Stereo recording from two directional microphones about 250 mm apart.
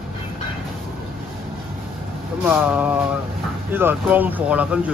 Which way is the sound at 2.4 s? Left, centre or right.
Centre.